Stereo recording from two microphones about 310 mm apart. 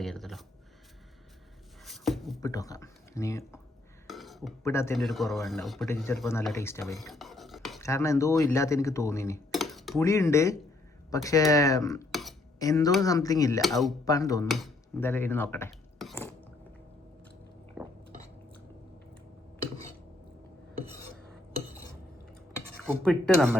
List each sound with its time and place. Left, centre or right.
0.0 s a sound: centre
1.8 s a sound: centre
2.4 s speech: centre
7.1 s cutlery: centre
11.1 s speech: centre
13.6 s speech: centre
14.0 s speech: centre
14.4 s speech: centre
17.8 s chewing: centre
23.0 s speech: centre